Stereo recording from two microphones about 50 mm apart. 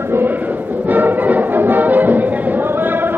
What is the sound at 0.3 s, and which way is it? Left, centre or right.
Music, right.